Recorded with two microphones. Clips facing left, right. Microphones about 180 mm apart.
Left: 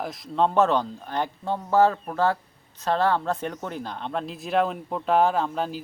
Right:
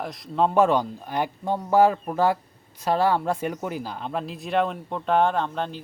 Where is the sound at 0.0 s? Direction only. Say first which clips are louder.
Even; centre (ahead or behind).